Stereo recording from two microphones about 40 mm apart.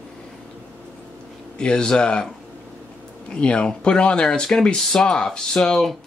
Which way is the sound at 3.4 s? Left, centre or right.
Left.